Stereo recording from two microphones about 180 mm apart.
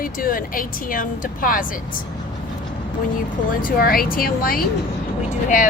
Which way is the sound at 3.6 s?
50° left (ahead or behind).